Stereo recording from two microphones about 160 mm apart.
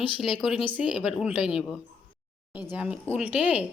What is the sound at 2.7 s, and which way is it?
Speech, 5° right (ahead or behind).